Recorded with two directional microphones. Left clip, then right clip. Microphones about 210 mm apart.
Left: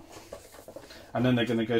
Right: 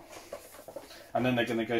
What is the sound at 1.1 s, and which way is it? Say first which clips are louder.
Speech: left 2 dB; 40° left (ahead or behind).